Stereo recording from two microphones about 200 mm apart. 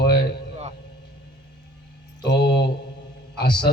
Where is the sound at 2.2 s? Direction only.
55° left (ahead or behind).